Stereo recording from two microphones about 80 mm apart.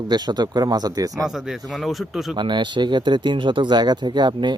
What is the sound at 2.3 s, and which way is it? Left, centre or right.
Speech, right.